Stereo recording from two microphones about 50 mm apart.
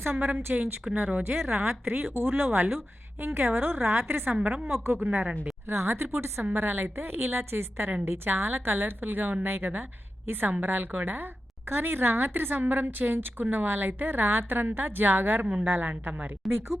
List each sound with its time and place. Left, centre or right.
0.0 s a woman's voice: right
0.5 s speech: right
1.5 s a woman's voice: right
4.9 s speech: right
5.6 s a woman's voice: right
6.4 s a woman's voice: right